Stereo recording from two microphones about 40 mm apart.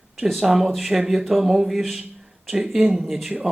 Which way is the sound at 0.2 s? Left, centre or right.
Centre.